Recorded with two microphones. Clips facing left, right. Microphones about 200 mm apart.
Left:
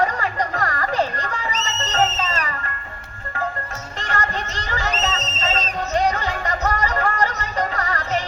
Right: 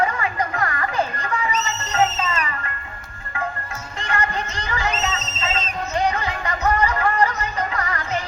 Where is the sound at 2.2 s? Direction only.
35° left (ahead or behind).